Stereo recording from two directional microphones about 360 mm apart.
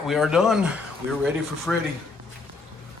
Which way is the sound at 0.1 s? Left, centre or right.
Centre.